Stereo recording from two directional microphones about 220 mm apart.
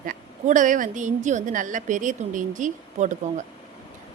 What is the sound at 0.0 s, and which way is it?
A woman's voice, 35° right (ahead or behind).